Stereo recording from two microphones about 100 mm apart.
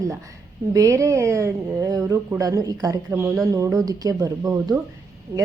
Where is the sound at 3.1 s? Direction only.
25° right (ahead or behind).